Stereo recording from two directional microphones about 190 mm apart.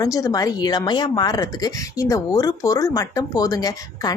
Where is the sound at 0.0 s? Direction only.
20° left (ahead or behind).